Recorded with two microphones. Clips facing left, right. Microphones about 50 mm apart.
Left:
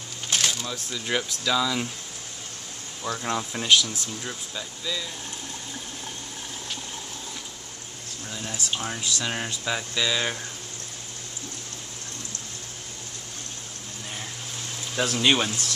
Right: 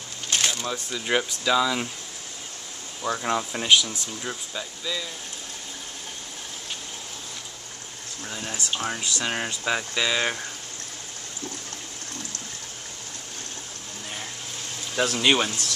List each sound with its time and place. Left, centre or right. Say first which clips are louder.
0.3 s a sound: right 1 dB; centre
0.9 s speech: right 3 dB; centre
3.2 s speech: right 1 dB; centre
8.3 s speech: right 1 dB; centre
15.0 s speech: right 1 dB; centre